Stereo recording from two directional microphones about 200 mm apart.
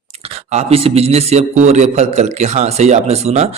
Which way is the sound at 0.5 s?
30° right (ahead or behind).